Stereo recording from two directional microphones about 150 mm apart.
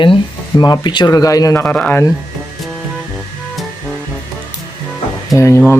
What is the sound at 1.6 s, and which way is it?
Speech, 10° left (ahead or behind).